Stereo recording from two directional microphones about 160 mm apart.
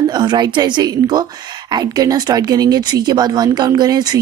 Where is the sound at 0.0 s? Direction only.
25° right (ahead or behind).